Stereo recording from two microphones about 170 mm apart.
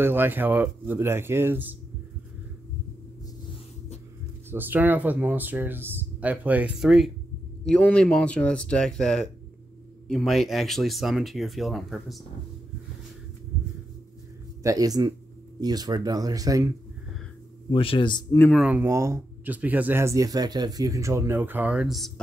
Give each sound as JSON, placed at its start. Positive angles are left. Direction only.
{"t": 0.0, "sound": "speech", "side_deg": -10}
{"t": 4.5, "sound": "speech", "side_deg": -10}
{"t": 14.6, "sound": "speech", "side_deg": -20}
{"t": 17.7, "sound": "a man's voice", "side_deg": 30}
{"t": 18.5, "sound": "speech", "side_deg": -5}